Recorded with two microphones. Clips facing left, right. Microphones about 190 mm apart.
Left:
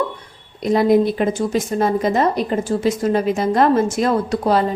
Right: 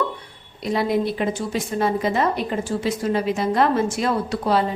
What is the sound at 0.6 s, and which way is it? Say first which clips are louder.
A woman's voice: left 7 dB; 45° left (ahead or behind).